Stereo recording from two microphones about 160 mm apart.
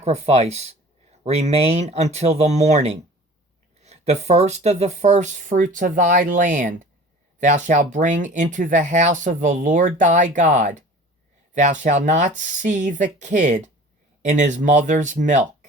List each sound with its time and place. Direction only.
0.0 s speech: 45° right (ahead or behind)